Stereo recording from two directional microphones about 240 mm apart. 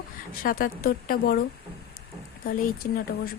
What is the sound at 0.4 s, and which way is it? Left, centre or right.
Speech, left.